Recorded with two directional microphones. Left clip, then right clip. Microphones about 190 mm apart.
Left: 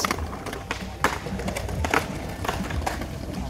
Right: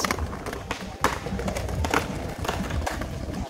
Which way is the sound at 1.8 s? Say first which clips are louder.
Left 2 dB; 40° left (ahead or behind).